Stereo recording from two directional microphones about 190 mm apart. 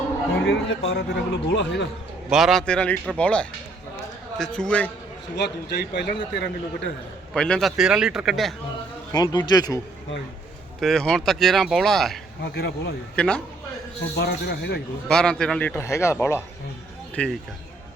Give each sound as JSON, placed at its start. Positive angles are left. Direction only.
{"t": 0.4, "sound": "speech", "side_deg": 80}
{"t": 1.1, "sound": "speech", "side_deg": 65}
{"t": 2.3, "sound": "speech", "side_deg": 0}
{"t": 5.4, "sound": "speech", "side_deg": 60}
{"t": 7.3, "sound": "speech", "side_deg": 5}
{"t": 9.1, "sound": "speech", "side_deg": 20}
{"t": 10.8, "sound": "speech", "side_deg": 0}
{"t": 12.4, "sound": "speech", "side_deg": 60}
{"t": 13.1, "sound": "speech", "side_deg": 5}
{"t": 14.2, "sound": "speech", "side_deg": 60}
{"t": 15.0, "sound": "a man's voice", "side_deg": 5}
{"t": 17.2, "sound": "speech", "side_deg": 5}